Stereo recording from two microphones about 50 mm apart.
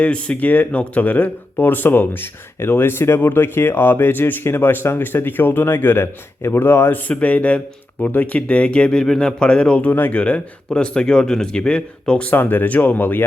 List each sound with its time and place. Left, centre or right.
0.0 s a man's voice: left
7.1 s speech: left
12.3 s speech: left